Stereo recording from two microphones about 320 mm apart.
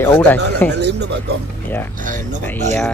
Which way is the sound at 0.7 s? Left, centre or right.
Right.